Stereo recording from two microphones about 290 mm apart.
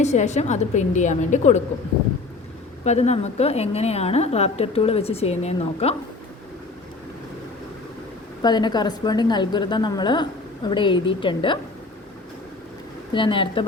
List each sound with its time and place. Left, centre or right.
0.0 s a woman's voice: left
2.8 s a woman's voice: left
8.4 s a woman's voice: centre
13.1 s a woman's voice: centre